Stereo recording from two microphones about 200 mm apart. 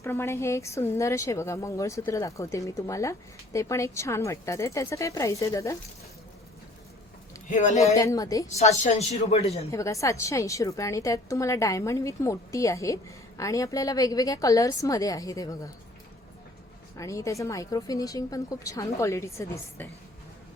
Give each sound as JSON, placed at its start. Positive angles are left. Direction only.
{"t": 0.0, "sound": "a woman's voice", "side_deg": 10}
{"t": 7.5, "sound": "speech", "side_deg": 35}
{"t": 7.9, "sound": "a woman's voice", "side_deg": 15}
{"t": 8.5, "sound": "speech", "side_deg": 35}
{"t": 9.7, "sound": "a woman's voice", "side_deg": 15}
{"t": 17.0, "sound": "a woman's voice", "side_deg": 15}